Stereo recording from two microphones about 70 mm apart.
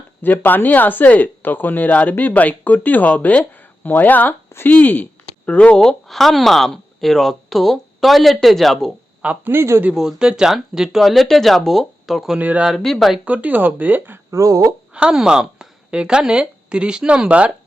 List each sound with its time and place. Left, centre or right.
0.2 s speech: left; by 8.9 s centre
9.4 s a man's voice: right
9.9 s speech: centre
12.4 s speech: right
12.8 s speech: centre
13.2 s speech: right
14.3 s speech: right
14.9 s speech: centre